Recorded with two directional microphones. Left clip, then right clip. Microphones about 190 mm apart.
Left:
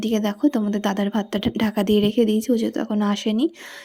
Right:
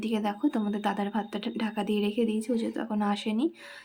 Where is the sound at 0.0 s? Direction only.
35° left (ahead or behind).